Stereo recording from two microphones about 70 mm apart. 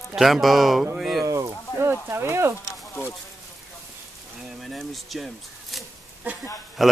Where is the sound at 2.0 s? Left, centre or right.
Right.